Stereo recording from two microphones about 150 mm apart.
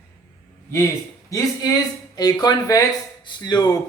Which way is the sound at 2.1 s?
25° left (ahead or behind).